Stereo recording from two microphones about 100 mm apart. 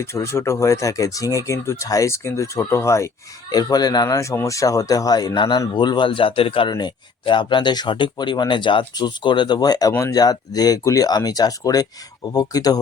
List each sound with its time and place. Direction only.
0.0 s speech: 25° left (ahead or behind)
3.5 s speech: 40° left (ahead or behind); by 6.7 s 60° left (ahead or behind)
6.7 s speech: 50° left (ahead or behind)